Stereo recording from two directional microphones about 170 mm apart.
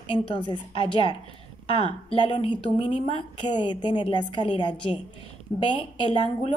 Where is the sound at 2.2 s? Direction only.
30° left (ahead or behind).